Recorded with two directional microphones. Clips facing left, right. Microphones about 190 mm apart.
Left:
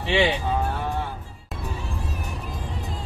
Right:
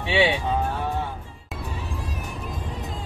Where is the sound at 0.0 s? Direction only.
Centre (ahead or behind).